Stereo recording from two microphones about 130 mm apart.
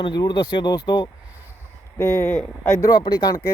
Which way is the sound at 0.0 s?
35° left (ahead or behind).